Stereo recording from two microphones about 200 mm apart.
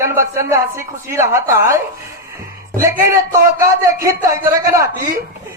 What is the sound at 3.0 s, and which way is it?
Speech, 15° right (ahead or behind).